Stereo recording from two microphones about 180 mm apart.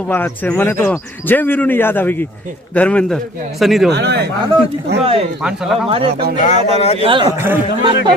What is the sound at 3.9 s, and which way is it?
Speech, 65° right (ahead or behind).